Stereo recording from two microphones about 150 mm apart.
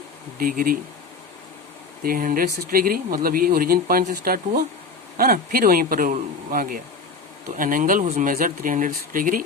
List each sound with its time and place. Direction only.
0.3 s speech: 70° right (ahead or behind)
2.0 s speech: 70° right (ahead or behind)